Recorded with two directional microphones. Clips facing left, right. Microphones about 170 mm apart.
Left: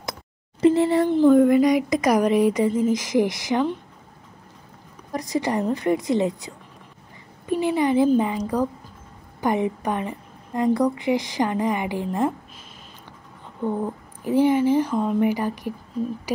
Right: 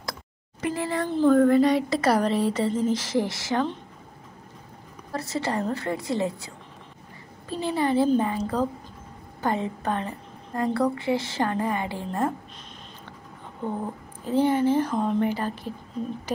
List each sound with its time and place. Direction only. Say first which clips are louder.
0.6 s speech: left 10 dB; 25° left (ahead or behind)
5.1 s speech: left 4 dB; 15° left (ahead or behind)
14.2 s speech: left 3 dB; 10° left (ahead or behind)